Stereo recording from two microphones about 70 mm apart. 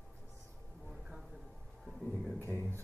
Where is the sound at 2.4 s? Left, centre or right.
Left.